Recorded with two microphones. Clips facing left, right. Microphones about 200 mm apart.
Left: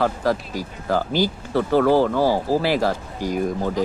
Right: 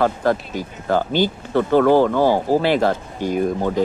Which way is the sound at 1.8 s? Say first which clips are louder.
Right 3 dB; 25° right (ahead or behind).